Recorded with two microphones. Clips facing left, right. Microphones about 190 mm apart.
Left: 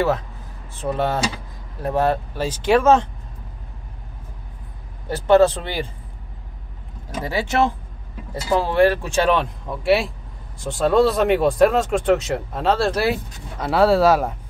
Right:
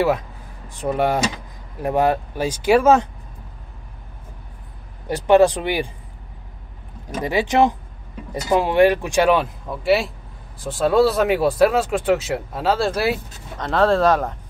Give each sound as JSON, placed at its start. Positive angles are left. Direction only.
{"t": 0.7, "sound": "speech", "side_deg": -15}
{"t": 5.0, "sound": "speech", "side_deg": -15}
{"t": 7.2, "sound": "speech", "side_deg": -15}